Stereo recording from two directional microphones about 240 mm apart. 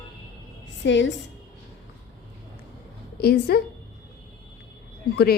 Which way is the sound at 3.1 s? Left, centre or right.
Left.